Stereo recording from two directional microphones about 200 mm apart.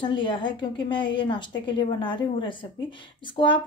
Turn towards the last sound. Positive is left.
turn(degrees=25)  # may be behind; listen again after turning